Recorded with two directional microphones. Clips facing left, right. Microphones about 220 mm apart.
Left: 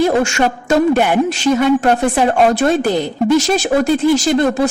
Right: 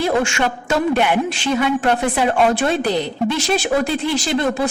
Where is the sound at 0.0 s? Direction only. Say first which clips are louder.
Left 4 dB; 40° left (ahead or behind).